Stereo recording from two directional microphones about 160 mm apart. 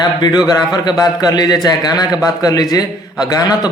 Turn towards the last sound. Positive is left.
turn(degrees=25)  # may be behind; listen again after turning